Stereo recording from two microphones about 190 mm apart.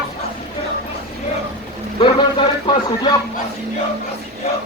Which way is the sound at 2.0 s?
25° left (ahead or behind).